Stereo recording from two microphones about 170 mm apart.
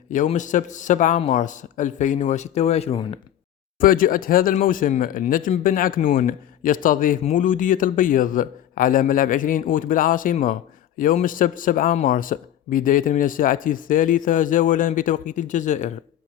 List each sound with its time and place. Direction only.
0.3 s speech: 45° left (ahead or behind)
3.8 s speech: 55° left (ahead or behind)